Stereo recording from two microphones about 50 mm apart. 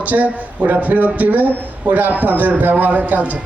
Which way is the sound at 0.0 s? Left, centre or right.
Right.